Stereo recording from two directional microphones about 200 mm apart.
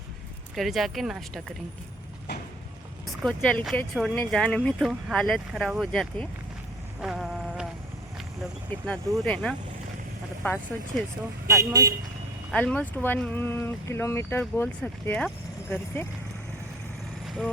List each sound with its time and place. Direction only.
0.5 s speech: centre (ahead or behind)
3.2 s speech: 5° left (ahead or behind)
7.0 s insect: centre (ahead or behind)
8.7 s speech: 5° left (ahead or behind)
11.4 s speech: 15° right (ahead or behind)
12.5 s speech: 5° left (ahead or behind)
17.2 s vehicle: 5° right (ahead or behind)